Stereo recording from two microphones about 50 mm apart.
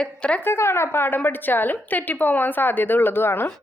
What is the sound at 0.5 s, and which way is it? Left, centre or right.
Speech, left.